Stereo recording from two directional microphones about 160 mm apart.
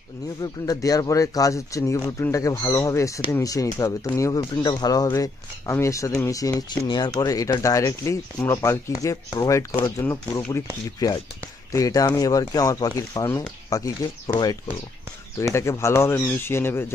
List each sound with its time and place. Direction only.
0.4 s speech: 20° left (ahead or behind)